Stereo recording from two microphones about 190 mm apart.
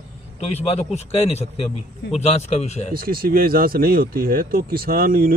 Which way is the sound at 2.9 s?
50° right (ahead or behind).